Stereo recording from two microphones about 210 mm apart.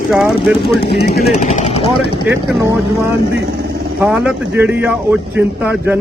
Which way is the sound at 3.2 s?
50° right (ahead or behind).